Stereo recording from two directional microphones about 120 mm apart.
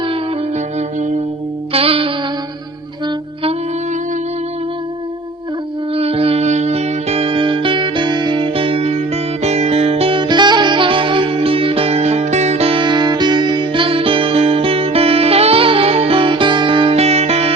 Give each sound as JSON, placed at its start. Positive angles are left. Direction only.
{"t": 0.5, "sound": "music", "side_deg": -80}
{"t": 1.7, "sound": "music", "side_deg": -50}
{"t": 5.9, "sound": "music", "side_deg": -55}